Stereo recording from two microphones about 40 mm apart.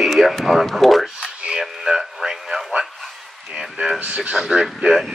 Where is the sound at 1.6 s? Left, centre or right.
Centre.